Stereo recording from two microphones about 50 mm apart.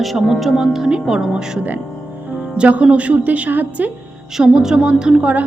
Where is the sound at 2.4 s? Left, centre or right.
Right.